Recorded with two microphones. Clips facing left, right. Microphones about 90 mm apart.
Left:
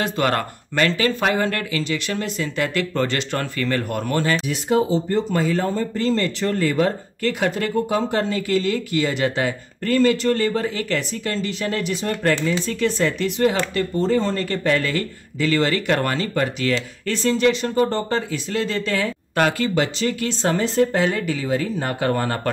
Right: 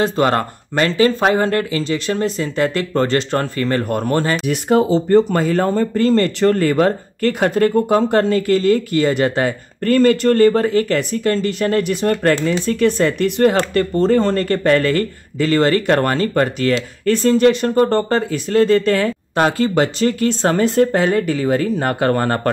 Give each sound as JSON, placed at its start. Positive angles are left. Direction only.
{"t": 0.0, "sound": "speech", "side_deg": -30}
{"t": 4.5, "sound": "speech", "side_deg": -55}
{"t": 19.3, "sound": "speech", "side_deg": -30}
{"t": 19.7, "sound": "speech", "side_deg": -45}